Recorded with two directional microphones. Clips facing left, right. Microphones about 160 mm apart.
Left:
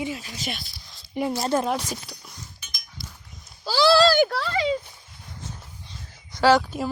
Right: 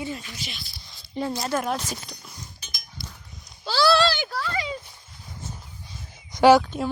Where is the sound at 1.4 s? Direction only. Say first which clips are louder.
Left 3 dB; 25° left (ahead or behind).